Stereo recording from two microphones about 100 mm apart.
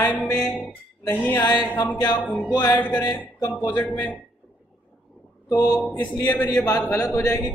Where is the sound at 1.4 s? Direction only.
45° left (ahead or behind).